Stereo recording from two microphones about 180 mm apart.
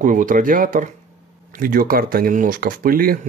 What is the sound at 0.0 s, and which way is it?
Speech, 45° right (ahead or behind).